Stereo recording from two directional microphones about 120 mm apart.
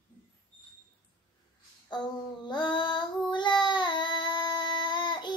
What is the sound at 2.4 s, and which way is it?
Child singing, 40° left (ahead or behind).